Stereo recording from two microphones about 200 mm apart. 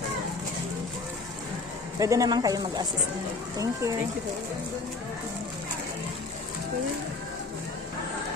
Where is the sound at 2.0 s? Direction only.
15° right (ahead or behind).